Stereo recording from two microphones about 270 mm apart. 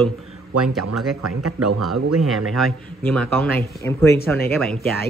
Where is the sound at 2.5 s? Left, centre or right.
Centre.